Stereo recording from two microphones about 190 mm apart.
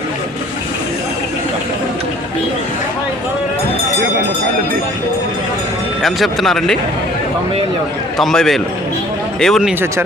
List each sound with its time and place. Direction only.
6.0 s speech: centre (ahead or behind)
8.2 s speech: centre (ahead or behind)